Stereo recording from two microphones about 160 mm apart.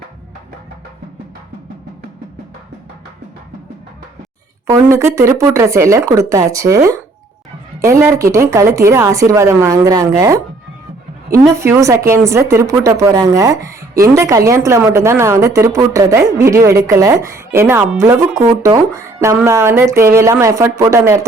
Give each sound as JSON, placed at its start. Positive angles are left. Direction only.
{"t": 4.6, "sound": "a woman's voice", "side_deg": -20}